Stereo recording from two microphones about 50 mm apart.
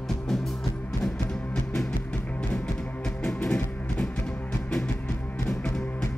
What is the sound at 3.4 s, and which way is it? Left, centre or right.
Music, left.